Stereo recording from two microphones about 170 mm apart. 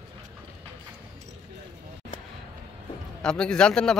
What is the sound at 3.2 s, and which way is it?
Speech, 5° left (ahead or behind).